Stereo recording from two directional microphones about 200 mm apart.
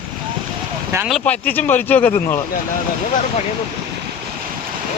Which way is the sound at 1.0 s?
5° left (ahead or behind).